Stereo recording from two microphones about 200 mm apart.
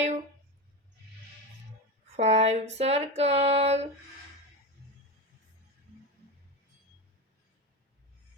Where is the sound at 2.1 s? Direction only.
35° right (ahead or behind).